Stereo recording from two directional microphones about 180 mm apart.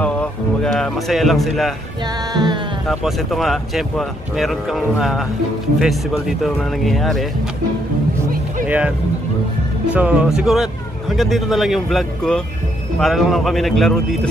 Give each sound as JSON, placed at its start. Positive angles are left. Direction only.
{"t": 0.0, "sound": "a man's voice", "side_deg": 5}
{"t": 2.3, "sound": "music", "side_deg": -25}
{"t": 2.9, "sound": "speech", "side_deg": 0}
{"t": 8.6, "sound": "speech", "side_deg": -5}
{"t": 9.9, "sound": "speech", "side_deg": -5}